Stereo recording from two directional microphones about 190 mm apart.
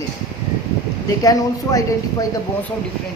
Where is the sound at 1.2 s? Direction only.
20° left (ahead or behind).